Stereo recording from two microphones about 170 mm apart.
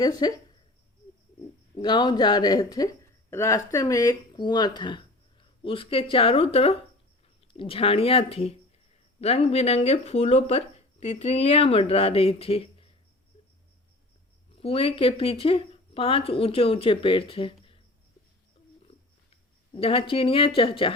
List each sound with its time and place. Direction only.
0.0 s speech: 25° left (ahead or behind)
1.7 s speech: 25° left (ahead or behind)
14.5 s speech: 35° left (ahead or behind)
18.9 s a sound: 35° left (ahead or behind)